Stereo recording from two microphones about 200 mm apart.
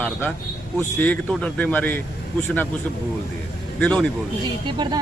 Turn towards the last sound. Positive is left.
turn(degrees=-20)  # may be behind; listen again after turning